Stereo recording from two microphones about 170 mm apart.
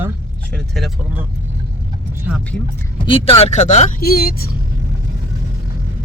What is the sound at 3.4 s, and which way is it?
Speech, 45° left (ahead or behind).